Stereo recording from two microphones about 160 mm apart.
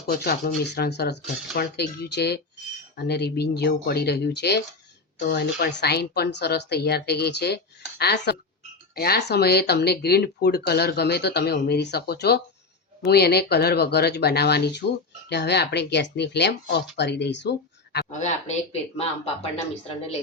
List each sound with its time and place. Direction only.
0.1 s speech: 85° left
18.1 s speech: 45° left (ahead or behind)